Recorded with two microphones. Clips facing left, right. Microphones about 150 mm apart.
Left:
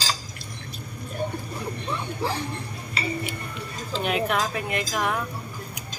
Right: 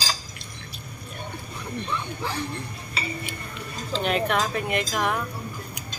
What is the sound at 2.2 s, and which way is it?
Speech, 35° left (ahead or behind).